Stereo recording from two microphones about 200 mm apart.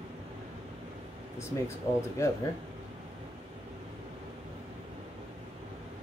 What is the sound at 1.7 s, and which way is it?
Speech, 15° left (ahead or behind).